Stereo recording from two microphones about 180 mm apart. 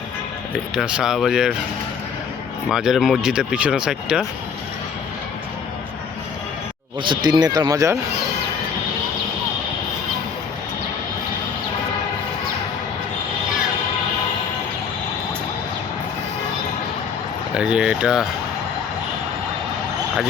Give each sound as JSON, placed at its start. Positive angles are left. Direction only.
{"t": 0.8, "sound": "speech", "side_deg": -5}
{"t": 2.6, "sound": "speech", "side_deg": 0}
{"t": 7.0, "sound": "speech", "side_deg": -25}
{"t": 17.5, "sound": "speech", "side_deg": -5}